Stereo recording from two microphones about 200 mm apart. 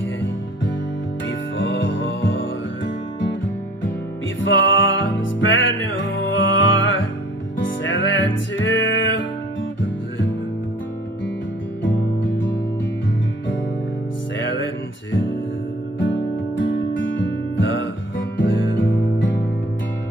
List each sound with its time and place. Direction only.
1.6 s music: 70° left (ahead or behind)
4.4 s music: 70° left (ahead or behind)
11.8 s music: 70° left (ahead or behind)
14.4 s music: 65° left (ahead or behind)
16.9 s music: 70° left (ahead or behind)